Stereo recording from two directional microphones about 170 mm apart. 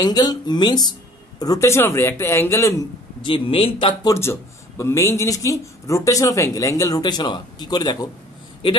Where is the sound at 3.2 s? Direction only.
30° left (ahead or behind).